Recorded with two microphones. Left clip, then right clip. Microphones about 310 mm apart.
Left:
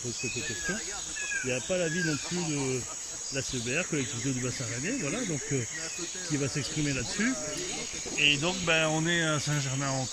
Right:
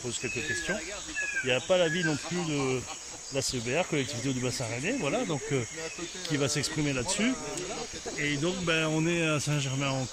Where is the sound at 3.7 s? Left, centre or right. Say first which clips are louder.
Right 1 dB; centre.